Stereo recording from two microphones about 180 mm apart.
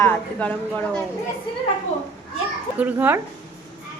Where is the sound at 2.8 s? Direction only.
10° right (ahead or behind).